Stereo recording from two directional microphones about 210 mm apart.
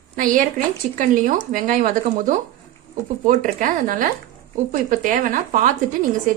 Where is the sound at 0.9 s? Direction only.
40° right (ahead or behind).